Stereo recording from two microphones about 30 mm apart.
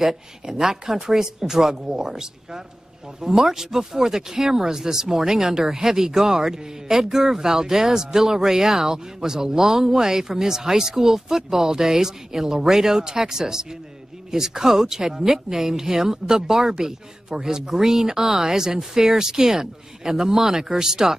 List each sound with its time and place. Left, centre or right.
0.6 s speech: centre
3.3 s speech: centre